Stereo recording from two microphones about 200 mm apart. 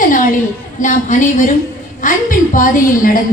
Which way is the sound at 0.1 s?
40° left (ahead or behind).